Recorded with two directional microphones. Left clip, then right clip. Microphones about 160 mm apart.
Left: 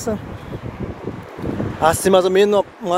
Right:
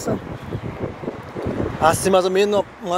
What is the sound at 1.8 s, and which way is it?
Speech, 45° left (ahead or behind).